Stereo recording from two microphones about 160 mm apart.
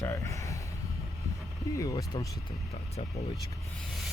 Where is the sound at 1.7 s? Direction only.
20° left (ahead or behind).